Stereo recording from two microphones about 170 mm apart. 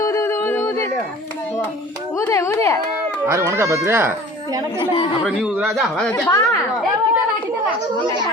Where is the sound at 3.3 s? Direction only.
15° right (ahead or behind).